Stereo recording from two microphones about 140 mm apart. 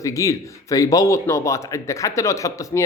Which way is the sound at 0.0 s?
25° left (ahead or behind).